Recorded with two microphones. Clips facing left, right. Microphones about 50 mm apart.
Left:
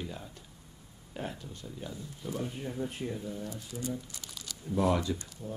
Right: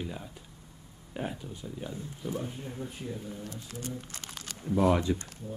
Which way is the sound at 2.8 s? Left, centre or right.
Left.